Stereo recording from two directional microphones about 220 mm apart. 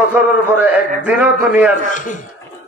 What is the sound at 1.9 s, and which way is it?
Speech, 35° left (ahead or behind).